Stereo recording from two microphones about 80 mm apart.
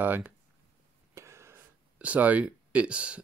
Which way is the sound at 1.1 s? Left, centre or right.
Right.